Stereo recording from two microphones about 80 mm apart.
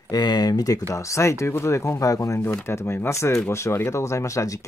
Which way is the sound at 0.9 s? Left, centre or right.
Left.